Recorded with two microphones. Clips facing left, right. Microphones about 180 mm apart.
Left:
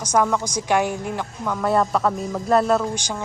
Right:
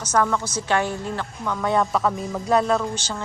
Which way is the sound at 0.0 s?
10° left (ahead or behind).